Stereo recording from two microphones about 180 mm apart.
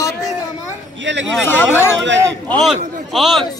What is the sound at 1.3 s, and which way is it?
Speech, 10° left (ahead or behind).